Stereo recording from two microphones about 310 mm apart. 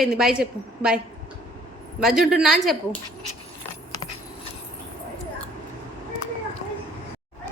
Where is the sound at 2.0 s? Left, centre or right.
Centre.